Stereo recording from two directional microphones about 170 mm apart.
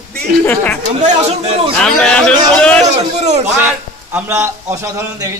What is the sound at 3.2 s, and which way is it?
Speech, 40° right (ahead or behind).